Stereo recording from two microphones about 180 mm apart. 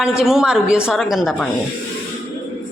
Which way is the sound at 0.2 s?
5° right (ahead or behind).